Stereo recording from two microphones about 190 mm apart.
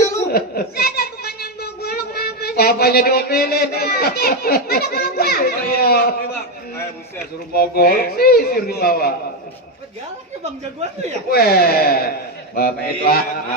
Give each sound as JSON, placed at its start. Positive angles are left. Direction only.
{"t": 0.3, "sound": "a child's voice", "side_deg": 55}
{"t": 7.5, "sound": "a man's voice", "side_deg": 55}
{"t": 11.3, "sound": "a man's voice", "side_deg": 55}